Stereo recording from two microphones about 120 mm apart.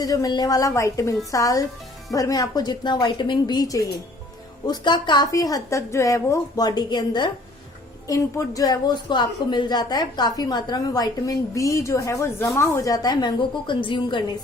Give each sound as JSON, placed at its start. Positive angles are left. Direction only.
{"t": 0.0, "sound": "a woman's voice", "side_deg": 30}